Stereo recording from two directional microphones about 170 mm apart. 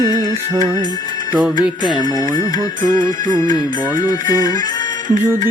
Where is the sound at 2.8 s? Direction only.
50° right (ahead or behind).